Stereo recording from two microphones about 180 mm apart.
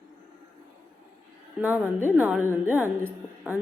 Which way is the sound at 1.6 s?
10° right (ahead or behind).